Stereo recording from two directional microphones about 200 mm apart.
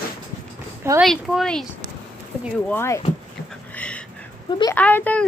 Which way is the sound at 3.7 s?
5° left (ahead or behind).